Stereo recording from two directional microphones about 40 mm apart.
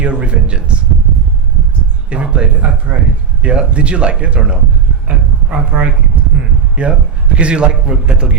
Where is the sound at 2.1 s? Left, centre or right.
Right.